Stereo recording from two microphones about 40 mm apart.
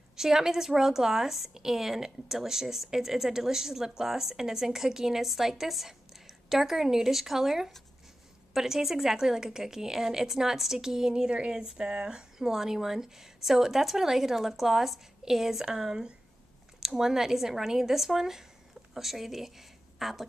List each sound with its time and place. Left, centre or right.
0.1 s speech: centre
11.2 s speech: right; by 20.2 s centre